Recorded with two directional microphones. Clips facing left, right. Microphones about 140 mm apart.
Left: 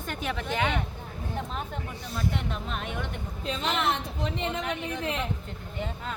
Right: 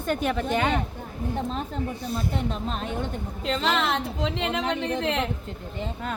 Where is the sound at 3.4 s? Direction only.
85° right.